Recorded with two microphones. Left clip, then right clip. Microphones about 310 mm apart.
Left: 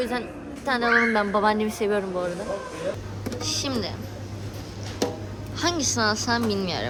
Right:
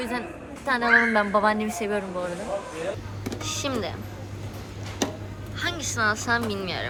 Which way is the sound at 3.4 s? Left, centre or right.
Centre.